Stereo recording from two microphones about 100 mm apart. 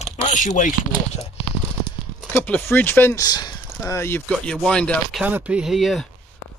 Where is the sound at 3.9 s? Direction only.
25° left (ahead or behind).